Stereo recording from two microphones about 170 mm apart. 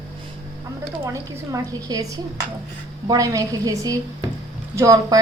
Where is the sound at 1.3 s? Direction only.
20° right (ahead or behind).